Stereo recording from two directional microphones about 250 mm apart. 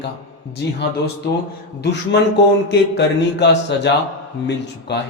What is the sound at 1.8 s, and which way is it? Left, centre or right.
A man's voice, left.